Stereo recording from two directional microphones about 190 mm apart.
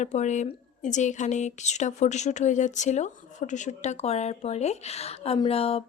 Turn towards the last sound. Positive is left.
turn(degrees=30)  # may be behind; listen again after turning